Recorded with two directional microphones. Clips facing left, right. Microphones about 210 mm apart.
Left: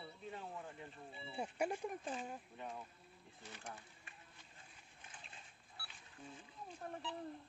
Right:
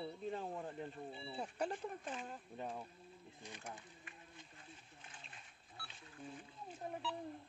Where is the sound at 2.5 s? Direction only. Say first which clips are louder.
Right 3 dB; 35° right (ahead or behind).